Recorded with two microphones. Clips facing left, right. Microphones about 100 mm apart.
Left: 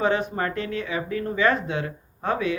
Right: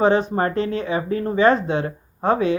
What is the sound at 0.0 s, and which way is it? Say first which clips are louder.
Speech: right 6 dB; 30° right (ahead or behind).